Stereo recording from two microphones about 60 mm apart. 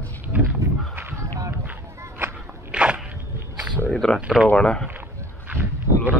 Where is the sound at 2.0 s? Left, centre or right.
Right.